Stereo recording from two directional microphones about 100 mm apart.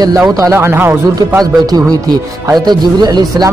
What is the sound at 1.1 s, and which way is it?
A man's voice, 40° right (ahead or behind).